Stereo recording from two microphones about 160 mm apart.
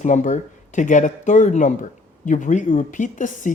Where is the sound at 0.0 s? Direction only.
50° left (ahead or behind).